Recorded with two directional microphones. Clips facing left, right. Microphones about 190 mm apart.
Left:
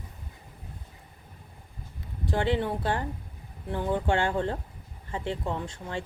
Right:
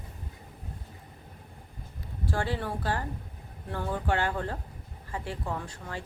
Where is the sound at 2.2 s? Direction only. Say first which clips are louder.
Left 5 dB; 20° left (ahead or behind).